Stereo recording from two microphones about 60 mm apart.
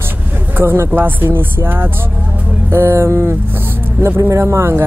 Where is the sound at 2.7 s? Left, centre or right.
Right.